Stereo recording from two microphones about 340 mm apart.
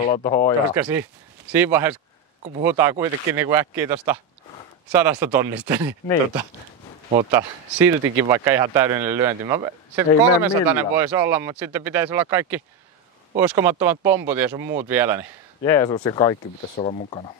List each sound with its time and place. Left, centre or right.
0.0 s speech: centre
0.7 s a man's voice: centre
7.1 s a man's voice: centre
15.6 s speech: centre